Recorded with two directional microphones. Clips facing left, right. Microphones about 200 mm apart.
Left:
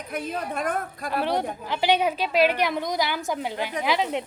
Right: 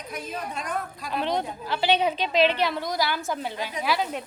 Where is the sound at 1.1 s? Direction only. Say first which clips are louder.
Left 2 dB; 10° left (ahead or behind).